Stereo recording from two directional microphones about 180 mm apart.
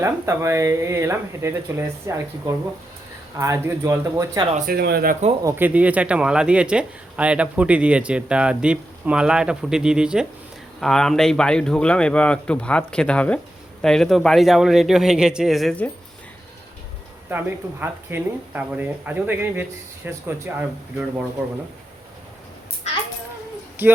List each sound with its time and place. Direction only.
0.0 s speech: 15° right (ahead or behind)
4.5 s speech: 55° right (ahead or behind)
5.4 s a man's voice: 15° right (ahead or behind); by 15.9 s 5° left (ahead or behind)
17.2 s speech: 10° right (ahead or behind)
23.8 s speech: 10° right (ahead or behind)